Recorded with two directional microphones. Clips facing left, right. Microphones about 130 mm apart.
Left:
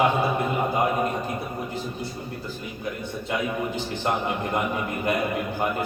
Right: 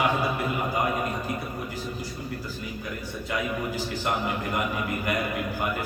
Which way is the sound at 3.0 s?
25° left (ahead or behind).